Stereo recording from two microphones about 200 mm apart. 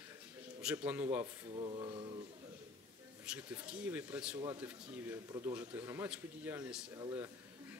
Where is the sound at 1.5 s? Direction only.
25° right (ahead or behind).